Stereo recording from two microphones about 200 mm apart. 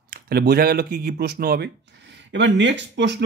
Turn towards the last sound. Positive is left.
turn(degrees=-60)  # may be behind; listen again after turning